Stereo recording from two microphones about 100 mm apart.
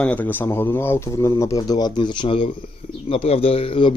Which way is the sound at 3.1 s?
75° left (ahead or behind).